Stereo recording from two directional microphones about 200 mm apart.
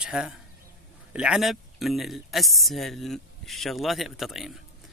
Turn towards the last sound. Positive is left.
turn(degrees=0)  # may be behind; listen again after turning